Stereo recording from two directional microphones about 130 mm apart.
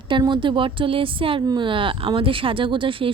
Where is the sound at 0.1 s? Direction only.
35° right (ahead or behind).